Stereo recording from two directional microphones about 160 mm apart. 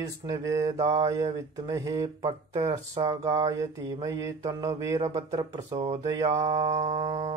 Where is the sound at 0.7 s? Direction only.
45° right (ahead or behind).